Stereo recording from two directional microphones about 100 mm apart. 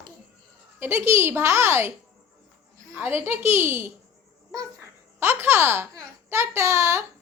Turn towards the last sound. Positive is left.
turn(degrees=-30)  # may be behind; listen again after turning